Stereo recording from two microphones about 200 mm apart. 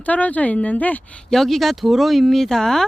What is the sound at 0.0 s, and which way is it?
Speech, 5° left (ahead or behind).